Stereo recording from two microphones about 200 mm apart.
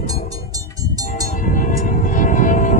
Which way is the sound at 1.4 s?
40° left (ahead or behind).